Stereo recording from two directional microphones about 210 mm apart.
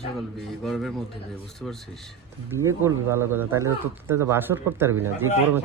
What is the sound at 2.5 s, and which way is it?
Speech, 15° right (ahead or behind).